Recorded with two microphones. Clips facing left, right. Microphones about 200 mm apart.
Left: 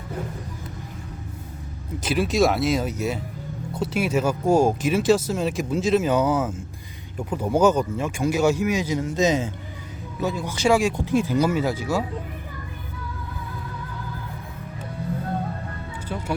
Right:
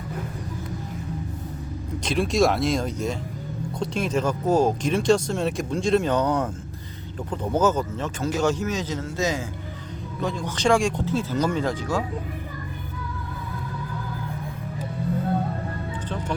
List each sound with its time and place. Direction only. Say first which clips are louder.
2.0 s speech: left 1 dB; 5° left (ahead or behind); by 9.5 s 20° left (ahead or behind)
10.2 s speech: left 2 dB; 5° left (ahead or behind)